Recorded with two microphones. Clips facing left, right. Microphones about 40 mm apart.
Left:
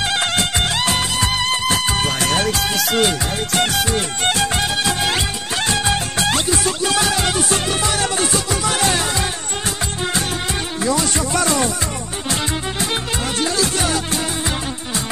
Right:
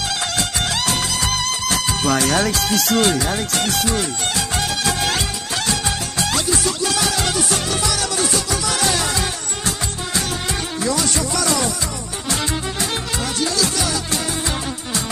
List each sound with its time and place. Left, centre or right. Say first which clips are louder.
0.2 s music: left 3 dB; left
3.5 s music: left 5 dB; left
4.8 s music: left 1 dB; left
5.7 s music: left 5 dB; left
10.8 s music: left 2 dB; left
13.6 s music: left 2 dB; left